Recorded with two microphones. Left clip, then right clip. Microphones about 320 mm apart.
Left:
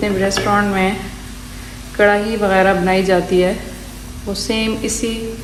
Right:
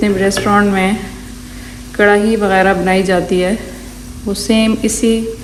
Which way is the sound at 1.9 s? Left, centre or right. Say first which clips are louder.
Right 3 dB; right.